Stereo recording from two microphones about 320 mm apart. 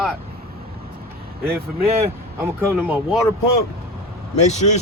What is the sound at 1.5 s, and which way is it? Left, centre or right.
Speech, centre.